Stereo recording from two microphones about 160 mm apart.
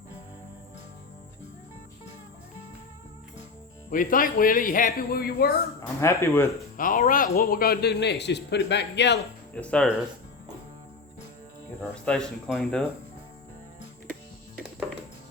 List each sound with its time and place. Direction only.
3.8 s speech: 60° left (ahead or behind)
6.0 s speech: 20° left (ahead or behind)
6.7 s speech: 60° left (ahead or behind); by 9.2 s 90° left
9.6 s speech: 5° left (ahead or behind)
11.8 s speech: 5° left (ahead or behind)